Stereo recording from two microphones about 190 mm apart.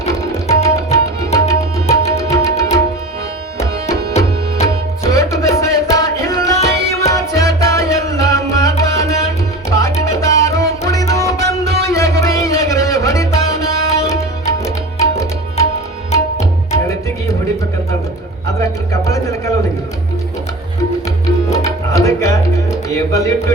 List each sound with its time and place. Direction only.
0.4 s tabla: 15° left (ahead or behind)
2.3 s music: 15° left (ahead or behind)
4.6 s music: 15° left (ahead or behind)
18.4 s a sound: 15° left (ahead or behind)
21.5 s music: 15° left (ahead or behind)